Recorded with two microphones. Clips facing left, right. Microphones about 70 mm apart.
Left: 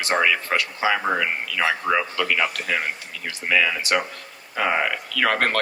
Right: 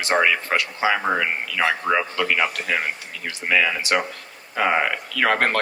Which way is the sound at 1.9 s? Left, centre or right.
Right.